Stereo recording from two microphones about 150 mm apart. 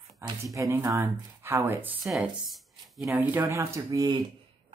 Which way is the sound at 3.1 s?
15° right (ahead or behind).